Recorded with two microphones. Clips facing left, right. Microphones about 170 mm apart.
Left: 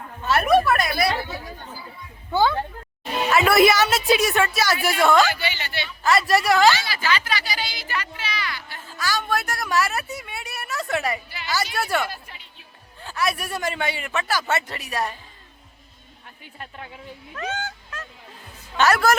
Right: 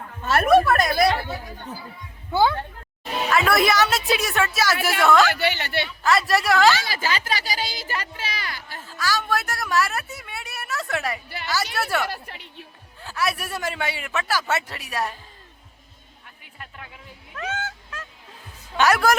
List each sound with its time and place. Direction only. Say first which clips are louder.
0.3 s a woman's voice: right 1 dB; 50° right (ahead or behind)
2.3 s a woman's voice: even; 10° right (ahead or behind)
3.3 s a man's voice: left 3 dB; 5° left (ahead or behind)
5.3 s a woman's voice: right 4 dB; 60° right (ahead or behind)
6.0 s a man's voice: left 2 dB; centre (ahead or behind)
6.8 s speech: left 1 dB; 40° right (ahead or behind)
8.9 s a man's voice: even; centre (ahead or behind)
12.0 s a woman's voice: right 3 dB; 70° right (ahead or behind)
13.0 s a man's voice: left 1 dB; 5° right (ahead or behind)
16.2 s speech: left 4 dB; 30° left (ahead or behind)
17.3 s fowl: even; 5° right (ahead or behind)
18.8 s a woman's voice: even; 10° right (ahead or behind)